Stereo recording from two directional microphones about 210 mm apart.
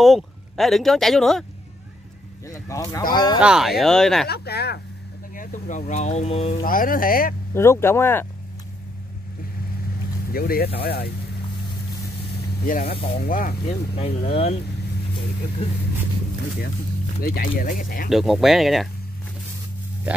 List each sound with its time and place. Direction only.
0.0 s speech: centre (ahead or behind)
2.4 s speech: 15° left (ahead or behind)
3.3 s speech: 5° right (ahead or behind)
4.3 s speech: 50° left (ahead or behind)
5.3 s speech: 40° left (ahead or behind)
6.6 s speech: 40° left (ahead or behind)
7.5 s speech: 10° left (ahead or behind)
10.3 s speech: 45° left (ahead or behind)
12.6 s speech: 40° left (ahead or behind)
13.7 s speech: 25° left (ahead or behind)
17.2 s speech: 45° left (ahead or behind)
18.1 s speech: centre (ahead or behind)